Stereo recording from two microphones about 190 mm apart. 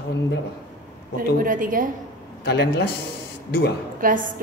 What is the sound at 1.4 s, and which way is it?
Speech, 45° right (ahead or behind).